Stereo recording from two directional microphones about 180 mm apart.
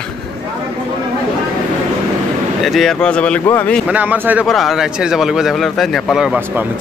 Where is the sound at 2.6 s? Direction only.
Centre (ahead or behind).